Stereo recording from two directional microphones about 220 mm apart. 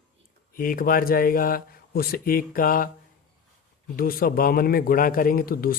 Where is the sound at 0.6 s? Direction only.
40° left (ahead or behind).